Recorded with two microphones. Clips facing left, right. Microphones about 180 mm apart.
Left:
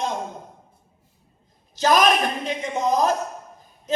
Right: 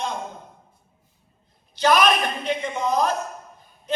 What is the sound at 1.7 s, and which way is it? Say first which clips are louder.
A man's voice: left 1 dB; 40° left (ahead or behind).